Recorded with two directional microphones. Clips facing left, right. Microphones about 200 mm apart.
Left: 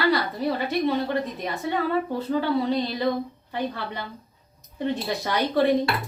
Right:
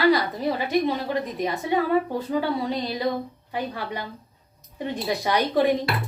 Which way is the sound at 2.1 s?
10° right (ahead or behind).